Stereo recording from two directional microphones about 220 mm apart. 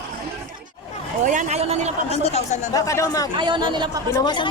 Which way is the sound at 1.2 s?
35° right (ahead or behind).